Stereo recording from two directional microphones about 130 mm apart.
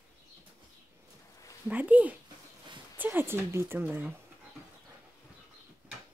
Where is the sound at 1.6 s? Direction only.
10° right (ahead or behind).